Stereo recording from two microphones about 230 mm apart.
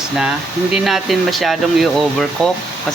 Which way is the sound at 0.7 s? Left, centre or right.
Centre.